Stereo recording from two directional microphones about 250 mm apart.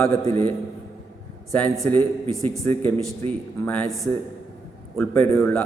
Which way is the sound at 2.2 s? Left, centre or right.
Right.